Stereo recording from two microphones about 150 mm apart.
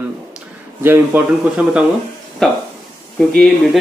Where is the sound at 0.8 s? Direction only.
15° right (ahead or behind).